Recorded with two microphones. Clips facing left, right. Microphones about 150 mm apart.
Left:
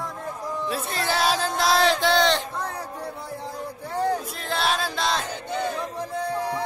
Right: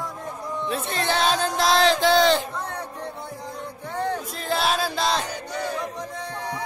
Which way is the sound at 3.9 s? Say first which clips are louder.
Left 2 dB; 35° left (ahead or behind).